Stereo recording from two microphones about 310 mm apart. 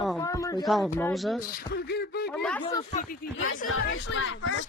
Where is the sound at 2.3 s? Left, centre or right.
Centre.